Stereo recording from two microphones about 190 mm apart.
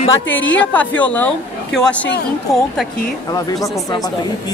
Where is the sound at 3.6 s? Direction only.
20° left (ahead or behind).